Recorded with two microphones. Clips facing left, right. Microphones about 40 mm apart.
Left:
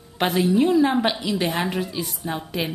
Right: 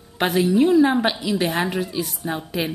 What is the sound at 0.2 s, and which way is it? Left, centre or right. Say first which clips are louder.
A woman's voice: right 2 dB; centre.